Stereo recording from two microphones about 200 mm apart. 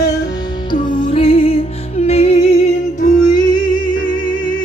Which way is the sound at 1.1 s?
30° left (ahead or behind).